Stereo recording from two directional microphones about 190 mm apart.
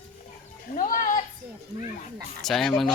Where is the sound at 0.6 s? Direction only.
45° left (ahead or behind).